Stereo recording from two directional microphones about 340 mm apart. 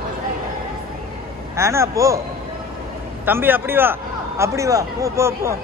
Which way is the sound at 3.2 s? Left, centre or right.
Centre.